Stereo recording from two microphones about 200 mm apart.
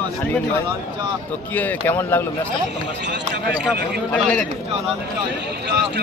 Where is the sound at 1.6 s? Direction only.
10° left (ahead or behind).